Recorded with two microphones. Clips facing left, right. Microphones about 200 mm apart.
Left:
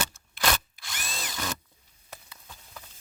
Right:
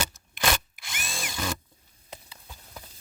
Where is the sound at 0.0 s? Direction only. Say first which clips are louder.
Right 1 dB; 15° right (ahead or behind).